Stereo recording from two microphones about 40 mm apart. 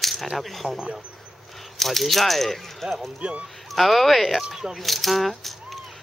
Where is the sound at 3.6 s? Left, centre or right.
Centre.